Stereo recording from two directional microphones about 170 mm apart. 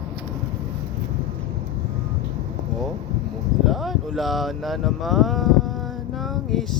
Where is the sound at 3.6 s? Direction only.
Centre (ahead or behind).